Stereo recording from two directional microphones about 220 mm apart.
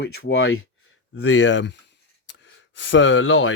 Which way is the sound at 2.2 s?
55° left (ahead or behind).